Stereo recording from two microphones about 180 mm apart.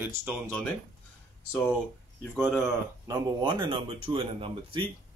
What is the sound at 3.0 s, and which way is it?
Speech, 25° right (ahead or behind).